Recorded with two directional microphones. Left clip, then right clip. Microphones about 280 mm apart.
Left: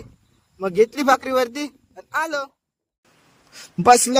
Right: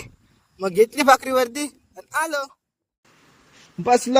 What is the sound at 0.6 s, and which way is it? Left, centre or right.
Speech, centre.